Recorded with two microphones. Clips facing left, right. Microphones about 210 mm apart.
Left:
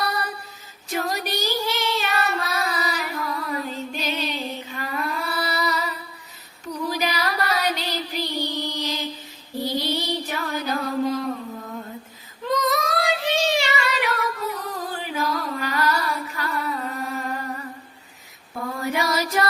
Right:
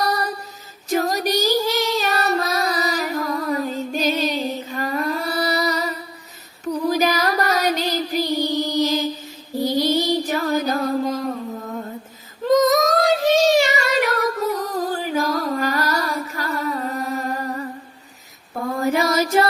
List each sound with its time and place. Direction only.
0.0 s female singing: 40° right (ahead or behind)
0.9 s child singing: 40° right (ahead or behind)
6.8 s music: 45° right (ahead or behind)
9.6 s mantra: 45° right (ahead or behind)
12.5 s child singing: 45° right (ahead or behind)
18.8 s female singing: 45° right (ahead or behind)